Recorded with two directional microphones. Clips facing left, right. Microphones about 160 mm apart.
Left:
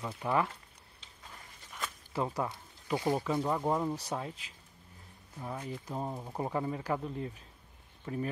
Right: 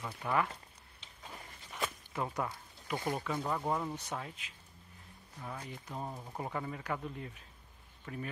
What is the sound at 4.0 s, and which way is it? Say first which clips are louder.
Speech: left 4 dB; 35° left (ahead or behind).